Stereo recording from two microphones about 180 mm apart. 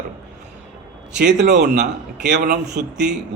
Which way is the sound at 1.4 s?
70° right (ahead or behind).